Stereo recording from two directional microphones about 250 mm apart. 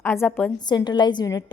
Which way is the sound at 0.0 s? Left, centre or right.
Centre.